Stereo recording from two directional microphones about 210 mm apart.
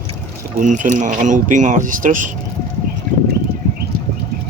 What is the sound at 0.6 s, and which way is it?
Speech, 35° right (ahead or behind).